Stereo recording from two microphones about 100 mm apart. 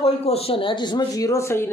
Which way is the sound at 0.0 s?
85° left.